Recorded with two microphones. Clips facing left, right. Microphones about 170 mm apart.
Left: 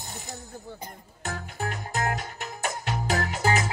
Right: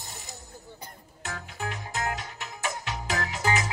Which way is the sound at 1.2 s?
40° left (ahead or behind).